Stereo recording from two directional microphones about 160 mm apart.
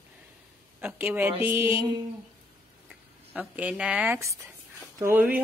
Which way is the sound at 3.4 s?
10° right (ahead or behind).